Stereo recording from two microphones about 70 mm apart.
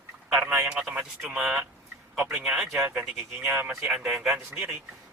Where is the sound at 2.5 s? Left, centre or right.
Centre.